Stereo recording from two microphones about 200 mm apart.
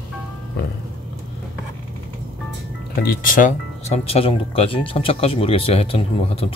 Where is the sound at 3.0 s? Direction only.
45° left (ahead or behind).